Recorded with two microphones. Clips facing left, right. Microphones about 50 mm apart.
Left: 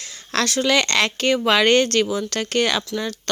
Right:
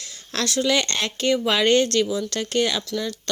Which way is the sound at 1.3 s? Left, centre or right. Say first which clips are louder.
Left 2 dB; left.